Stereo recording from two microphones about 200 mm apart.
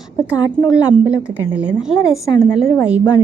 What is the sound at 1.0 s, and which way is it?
Speech, 5° right (ahead or behind).